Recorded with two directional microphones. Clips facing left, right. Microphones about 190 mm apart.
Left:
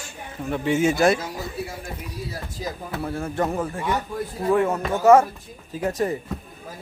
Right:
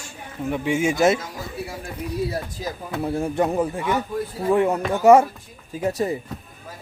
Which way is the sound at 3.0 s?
15° right (ahead or behind).